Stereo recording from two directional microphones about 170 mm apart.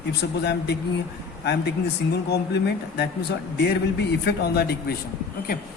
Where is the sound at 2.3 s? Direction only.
75° left (ahead or behind).